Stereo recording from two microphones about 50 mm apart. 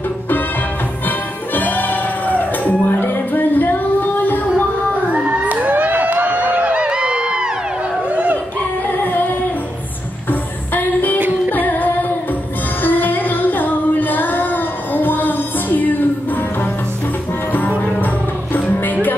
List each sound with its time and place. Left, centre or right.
1.0 s music: left
5.1 s a sound: right
6.8 s crowd: centre
8.1 s a sound: right
10.7 s music: left
11.1 s music: right
11.5 s music: left